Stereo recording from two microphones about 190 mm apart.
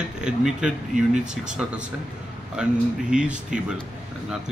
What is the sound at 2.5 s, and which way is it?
Speech, 5° right (ahead or behind).